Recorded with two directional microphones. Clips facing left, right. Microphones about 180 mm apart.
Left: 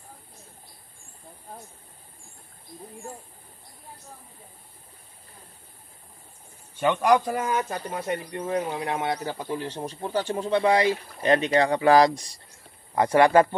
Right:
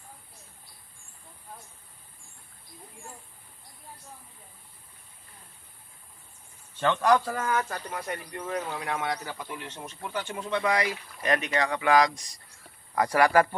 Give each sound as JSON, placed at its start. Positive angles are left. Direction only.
{"t": 6.8, "sound": "speech", "side_deg": 15}